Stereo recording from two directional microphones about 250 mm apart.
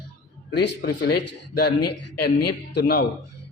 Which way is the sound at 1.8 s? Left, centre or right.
Left.